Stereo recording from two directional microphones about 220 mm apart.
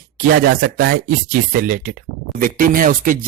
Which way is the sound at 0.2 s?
40° right (ahead or behind).